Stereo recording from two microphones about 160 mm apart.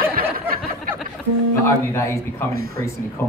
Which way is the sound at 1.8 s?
15° left (ahead or behind).